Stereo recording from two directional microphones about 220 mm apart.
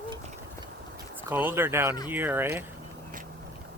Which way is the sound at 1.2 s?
10° right (ahead or behind).